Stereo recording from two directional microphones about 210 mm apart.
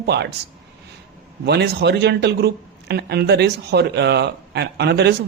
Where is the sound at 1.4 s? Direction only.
55° right (ahead or behind).